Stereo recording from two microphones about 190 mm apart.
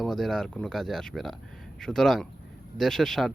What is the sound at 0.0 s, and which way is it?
Speech, centre (ahead or behind).